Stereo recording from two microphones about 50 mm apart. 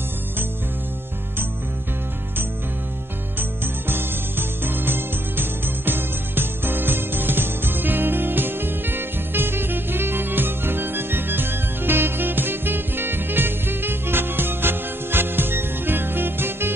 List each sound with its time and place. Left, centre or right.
3.3 s music: right